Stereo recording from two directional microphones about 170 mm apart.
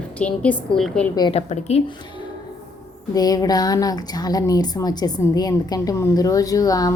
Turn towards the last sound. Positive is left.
turn(degrees=20)  # may be behind; listen again after turning